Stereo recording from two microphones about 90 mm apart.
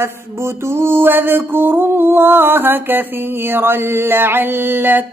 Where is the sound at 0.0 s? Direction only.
30° right (ahead or behind).